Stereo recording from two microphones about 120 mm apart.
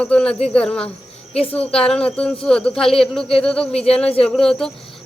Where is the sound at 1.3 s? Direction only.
55° left (ahead or behind).